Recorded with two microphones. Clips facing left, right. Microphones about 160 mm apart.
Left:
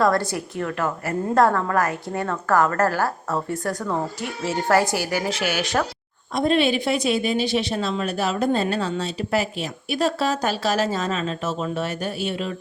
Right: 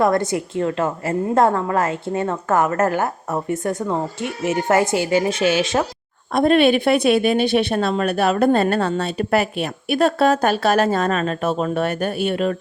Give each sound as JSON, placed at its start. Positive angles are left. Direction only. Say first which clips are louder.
{"t": 0.0, "sound": "a woman's voice", "louder": "right 3 dB", "side_deg": -20}
{"t": 6.3, "sound": "speech", "louder": "right 5 dB", "side_deg": -55}